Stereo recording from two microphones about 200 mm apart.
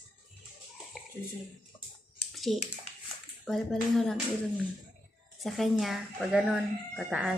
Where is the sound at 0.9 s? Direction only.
5° right (ahead or behind).